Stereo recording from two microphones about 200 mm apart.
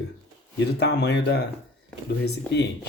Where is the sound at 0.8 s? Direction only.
60° left (ahead or behind).